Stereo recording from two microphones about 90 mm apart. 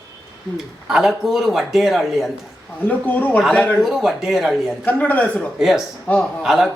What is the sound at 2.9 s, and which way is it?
Speech, 15° left (ahead or behind).